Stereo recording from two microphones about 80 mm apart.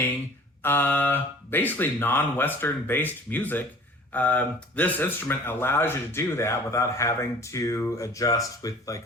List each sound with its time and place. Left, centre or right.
0.6 s speech: left